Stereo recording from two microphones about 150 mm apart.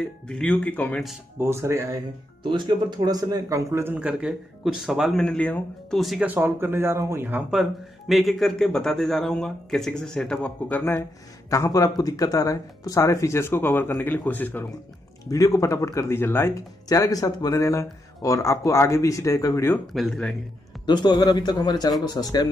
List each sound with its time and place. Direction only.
0.3 s speech: 5° left (ahead or behind)
1.4 s speech: 15° right (ahead or behind)
2.4 s speech: 30° right (ahead or behind); by 6.2 s centre (ahead or behind)
6.2 s speech: 15° right (ahead or behind)
8.1 s speech: centre (ahead or behind)
15.2 s speech: 25° left (ahead or behind)
19.9 s speech: 5° left (ahead or behind)
20.8 s speech: 30° left (ahead or behind)